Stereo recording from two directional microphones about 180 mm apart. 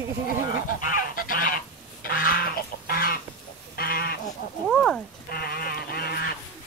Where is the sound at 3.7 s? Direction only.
55° left (ahead or behind).